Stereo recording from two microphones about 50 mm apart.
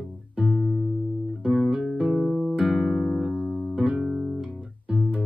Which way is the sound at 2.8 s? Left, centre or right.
Right.